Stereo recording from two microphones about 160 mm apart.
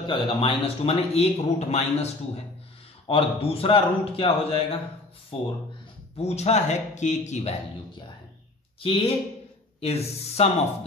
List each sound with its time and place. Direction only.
0.0 s a man's voice: 30° left (ahead or behind)
8.8 s a man's voice: 35° left (ahead or behind)